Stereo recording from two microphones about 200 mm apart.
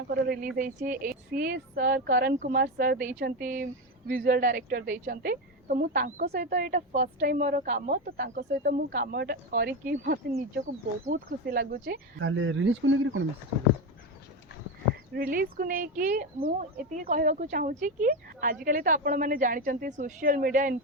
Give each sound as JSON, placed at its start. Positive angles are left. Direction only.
{"t": 0.1, "sound": "speech", "side_deg": -50}
{"t": 6.9, "sound": "speech", "side_deg": -35}
{"t": 12.2, "sound": "speech", "side_deg": -70}
{"t": 15.1, "sound": "speech", "side_deg": -50}